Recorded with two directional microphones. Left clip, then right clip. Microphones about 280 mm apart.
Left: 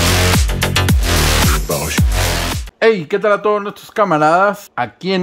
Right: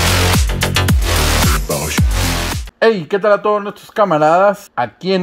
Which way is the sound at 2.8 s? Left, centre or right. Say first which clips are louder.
Even; centre.